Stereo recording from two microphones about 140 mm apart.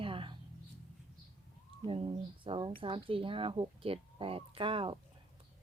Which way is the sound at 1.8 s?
35° right (ahead or behind).